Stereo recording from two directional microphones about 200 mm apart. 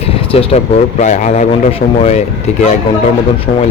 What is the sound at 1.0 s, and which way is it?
Speech, 35° left (ahead or behind).